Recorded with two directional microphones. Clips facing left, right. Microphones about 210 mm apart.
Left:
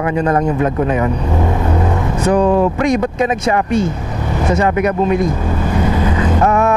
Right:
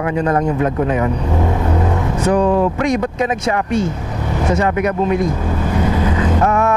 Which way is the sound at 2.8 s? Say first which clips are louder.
Left 2 dB; 10° left (ahead or behind).